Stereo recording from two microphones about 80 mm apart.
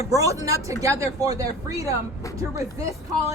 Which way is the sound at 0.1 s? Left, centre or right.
Right.